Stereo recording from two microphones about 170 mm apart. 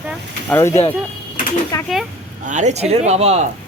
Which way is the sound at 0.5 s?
15° left (ahead or behind).